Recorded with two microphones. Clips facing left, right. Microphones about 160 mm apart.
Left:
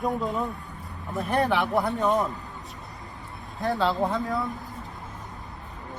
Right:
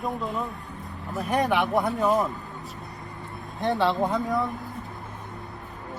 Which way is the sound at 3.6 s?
20° right (ahead or behind).